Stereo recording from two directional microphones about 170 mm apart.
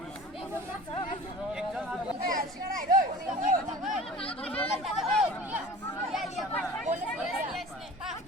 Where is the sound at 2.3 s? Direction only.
55° right (ahead or behind).